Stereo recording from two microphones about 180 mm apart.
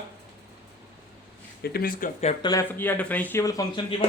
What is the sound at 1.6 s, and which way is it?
Speech, 55° left (ahead or behind).